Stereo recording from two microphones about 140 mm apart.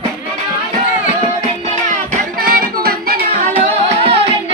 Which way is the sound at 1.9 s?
75° right (ahead or behind).